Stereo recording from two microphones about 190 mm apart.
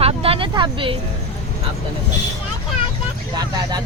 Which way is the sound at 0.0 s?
30° right (ahead or behind).